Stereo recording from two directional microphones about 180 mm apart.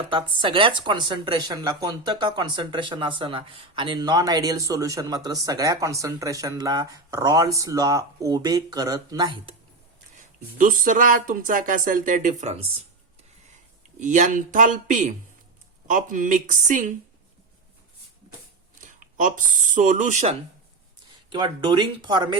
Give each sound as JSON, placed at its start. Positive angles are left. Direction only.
{"t": 0.1, "sound": "speech", "side_deg": -25}
{"t": 10.2, "sound": "speech", "side_deg": -45}
{"t": 14.0, "sound": "speech", "side_deg": -45}
{"t": 18.8, "sound": "speech", "side_deg": -45}
{"t": 21.2, "sound": "speech", "side_deg": -25}